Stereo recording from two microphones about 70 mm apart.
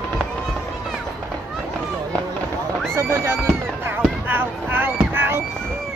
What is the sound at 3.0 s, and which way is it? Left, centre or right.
Speech, right.